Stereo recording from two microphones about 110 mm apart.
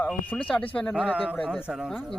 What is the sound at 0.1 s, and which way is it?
Speech, 10° left (ahead or behind).